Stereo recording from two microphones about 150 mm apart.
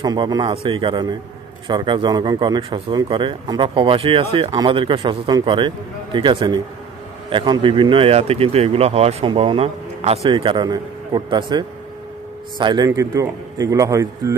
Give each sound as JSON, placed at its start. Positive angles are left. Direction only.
{"t": 0.0, "sound": "speech", "side_deg": -25}
{"t": 10.3, "sound": "a man's voice", "side_deg": -30}